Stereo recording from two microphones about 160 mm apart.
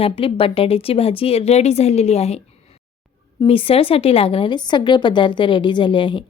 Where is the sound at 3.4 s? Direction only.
35° left (ahead or behind).